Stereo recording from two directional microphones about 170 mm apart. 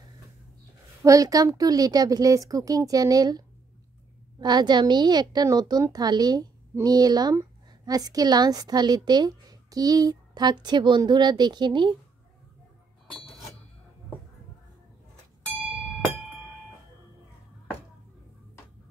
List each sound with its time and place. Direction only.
1.0 s a woman's voice: 20° right (ahead or behind)